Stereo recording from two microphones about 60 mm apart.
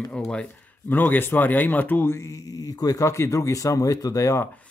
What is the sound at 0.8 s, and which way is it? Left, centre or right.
Speech, left.